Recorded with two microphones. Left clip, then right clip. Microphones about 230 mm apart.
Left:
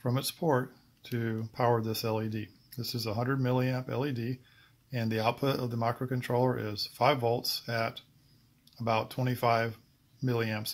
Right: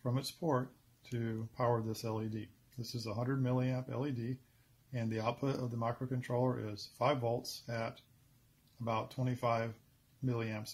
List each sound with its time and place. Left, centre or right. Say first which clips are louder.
0.0 s speech: left 7 dB; centre